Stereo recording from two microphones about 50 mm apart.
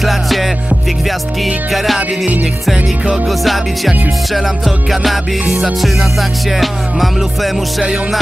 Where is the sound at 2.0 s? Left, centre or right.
Right.